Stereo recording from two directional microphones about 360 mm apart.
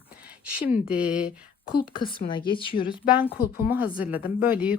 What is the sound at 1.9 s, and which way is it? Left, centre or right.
Speech, centre.